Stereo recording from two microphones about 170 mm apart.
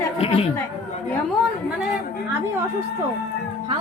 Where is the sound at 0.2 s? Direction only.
35° left (ahead or behind).